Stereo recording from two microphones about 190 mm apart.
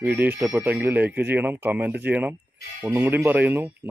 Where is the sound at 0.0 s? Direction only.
10° right (ahead or behind).